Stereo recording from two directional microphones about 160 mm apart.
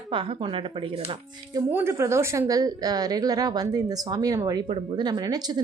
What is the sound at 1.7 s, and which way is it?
Speech, 15° right (ahead or behind).